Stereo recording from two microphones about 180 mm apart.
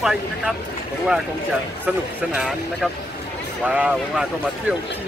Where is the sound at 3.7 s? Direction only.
5° right (ahead or behind).